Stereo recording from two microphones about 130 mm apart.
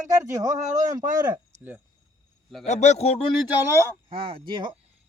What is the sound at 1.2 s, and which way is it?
Speech, 30° right (ahead or behind).